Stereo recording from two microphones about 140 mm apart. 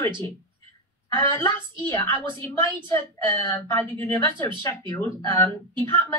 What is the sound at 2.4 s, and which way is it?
Speech, 15° left (ahead or behind).